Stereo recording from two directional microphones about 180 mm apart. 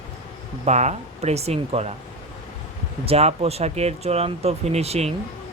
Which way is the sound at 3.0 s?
35° right (ahead or behind).